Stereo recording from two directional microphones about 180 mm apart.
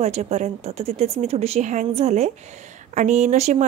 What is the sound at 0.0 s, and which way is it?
Speech, 35° right (ahead or behind).